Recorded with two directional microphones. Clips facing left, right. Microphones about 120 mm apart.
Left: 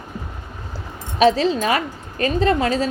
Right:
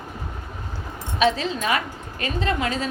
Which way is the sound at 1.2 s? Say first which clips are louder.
Left 6 dB; 35° left (ahead or behind).